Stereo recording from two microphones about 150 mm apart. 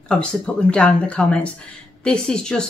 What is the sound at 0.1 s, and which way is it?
Speech, 5° left (ahead or behind).